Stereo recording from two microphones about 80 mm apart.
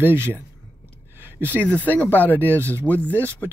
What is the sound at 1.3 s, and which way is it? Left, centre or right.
Speech, right.